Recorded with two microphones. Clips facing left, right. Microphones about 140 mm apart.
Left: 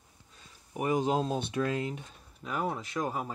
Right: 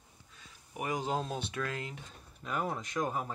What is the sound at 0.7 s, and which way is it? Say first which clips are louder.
Speech: left 6 dB; 25° left (ahead or behind).